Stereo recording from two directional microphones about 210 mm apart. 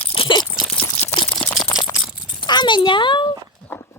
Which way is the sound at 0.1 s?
25° left (ahead or behind).